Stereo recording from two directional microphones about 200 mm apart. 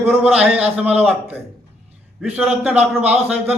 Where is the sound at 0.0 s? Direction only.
5° right (ahead or behind).